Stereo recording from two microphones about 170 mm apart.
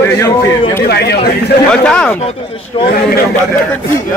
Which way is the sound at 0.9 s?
70° left (ahead or behind).